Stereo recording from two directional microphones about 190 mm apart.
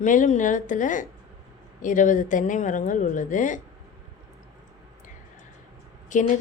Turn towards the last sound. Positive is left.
turn(degrees=40)  # may be behind; listen again after turning